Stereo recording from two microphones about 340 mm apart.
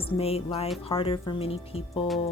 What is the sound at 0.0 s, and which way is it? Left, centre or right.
Speech, centre.